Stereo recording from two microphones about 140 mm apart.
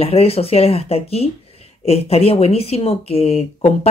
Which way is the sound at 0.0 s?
45° left (ahead or behind).